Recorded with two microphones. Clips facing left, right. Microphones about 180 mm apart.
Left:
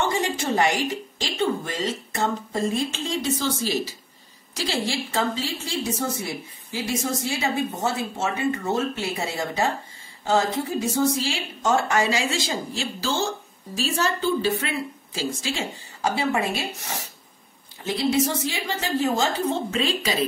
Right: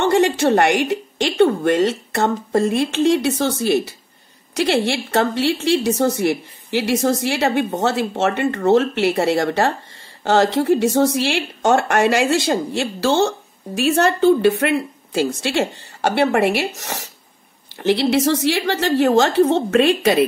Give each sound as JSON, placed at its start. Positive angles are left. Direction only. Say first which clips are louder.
{"t": 0.0, "sound": "a woman's voice", "louder": "right 9 dB", "side_deg": -70}